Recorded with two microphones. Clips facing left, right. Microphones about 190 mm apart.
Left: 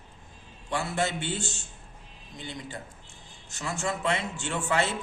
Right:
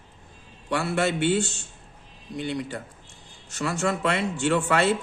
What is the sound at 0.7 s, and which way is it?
Speech, 65° right (ahead or behind).